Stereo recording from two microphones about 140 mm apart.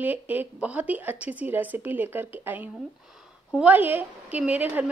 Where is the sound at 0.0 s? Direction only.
10° right (ahead or behind).